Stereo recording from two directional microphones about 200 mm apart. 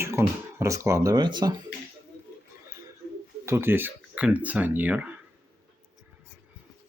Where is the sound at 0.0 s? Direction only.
15° right (ahead or behind).